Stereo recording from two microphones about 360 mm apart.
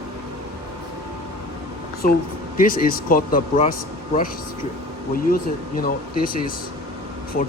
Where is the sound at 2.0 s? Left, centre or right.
Left.